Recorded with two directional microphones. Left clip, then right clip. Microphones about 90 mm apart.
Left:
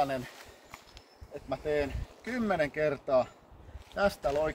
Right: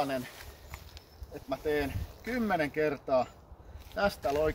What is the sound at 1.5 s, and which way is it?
Speech, 25° left (ahead or behind).